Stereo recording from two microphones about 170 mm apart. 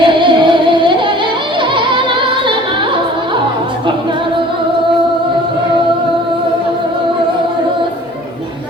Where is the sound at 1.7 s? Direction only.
30° right (ahead or behind).